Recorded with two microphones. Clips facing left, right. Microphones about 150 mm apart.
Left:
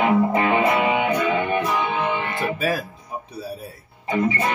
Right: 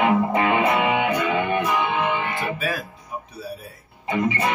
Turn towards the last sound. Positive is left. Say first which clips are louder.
# left 1 dB
turn(degrees=0)  # may be behind; listen again after turning